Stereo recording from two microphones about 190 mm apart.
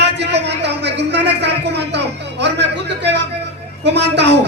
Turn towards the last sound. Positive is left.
turn(degrees=-65)  # may be behind; listen again after turning